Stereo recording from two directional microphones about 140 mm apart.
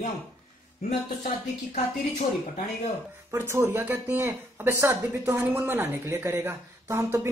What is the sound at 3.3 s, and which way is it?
A woman's voice, 15° right (ahead or behind).